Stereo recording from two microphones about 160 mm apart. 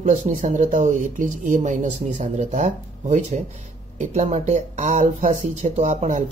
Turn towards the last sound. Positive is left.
turn(degrees=-50)  # may be behind; listen again after turning